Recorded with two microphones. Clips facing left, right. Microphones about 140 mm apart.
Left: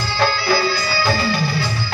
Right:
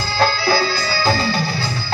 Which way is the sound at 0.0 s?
35° right (ahead or behind).